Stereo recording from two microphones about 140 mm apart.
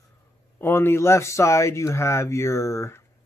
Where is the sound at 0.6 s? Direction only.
15° left (ahead or behind).